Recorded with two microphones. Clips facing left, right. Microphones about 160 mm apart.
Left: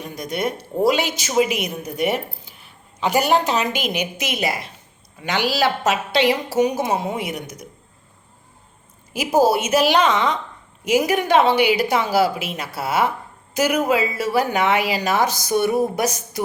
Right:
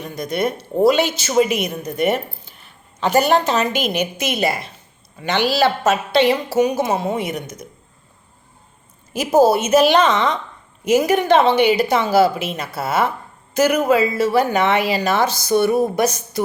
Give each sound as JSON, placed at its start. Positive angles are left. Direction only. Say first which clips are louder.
{"t": 0.0, "sound": "a woman's voice", "louder": "right 3 dB", "side_deg": 15}
{"t": 9.1, "sound": "a woman's voice", "louder": "right 3 dB", "side_deg": 10}